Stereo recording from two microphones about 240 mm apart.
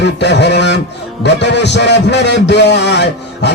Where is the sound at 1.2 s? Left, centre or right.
Left.